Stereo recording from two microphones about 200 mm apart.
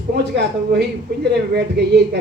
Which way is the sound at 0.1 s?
55° right (ahead or behind).